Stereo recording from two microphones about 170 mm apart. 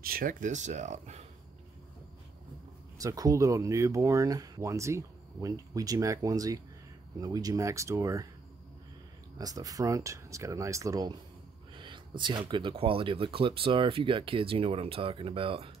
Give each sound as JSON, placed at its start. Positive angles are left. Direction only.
{"t": 0.0, "sound": "speech", "side_deg": -55}
{"t": 3.0, "sound": "speech", "side_deg": -20}
{"t": 9.4, "sound": "speech", "side_deg": -20}